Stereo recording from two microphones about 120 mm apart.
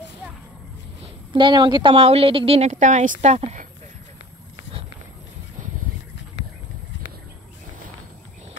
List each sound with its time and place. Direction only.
1.0 s a woman's voice: 45° right (ahead or behind)
2.0 s a woman's voice: 55° right (ahead or behind)